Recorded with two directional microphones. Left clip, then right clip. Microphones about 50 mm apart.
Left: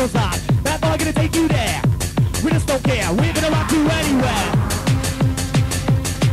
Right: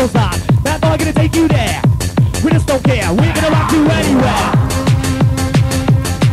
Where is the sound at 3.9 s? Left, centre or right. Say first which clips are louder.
Right 5 dB; centre.